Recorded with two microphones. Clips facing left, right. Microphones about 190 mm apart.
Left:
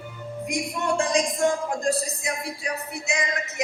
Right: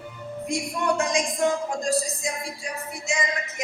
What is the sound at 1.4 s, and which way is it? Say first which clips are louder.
Music: left 1 dB; 60° left (ahead or behind).